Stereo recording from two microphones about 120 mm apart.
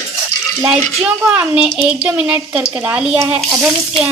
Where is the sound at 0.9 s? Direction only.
5° right (ahead or behind).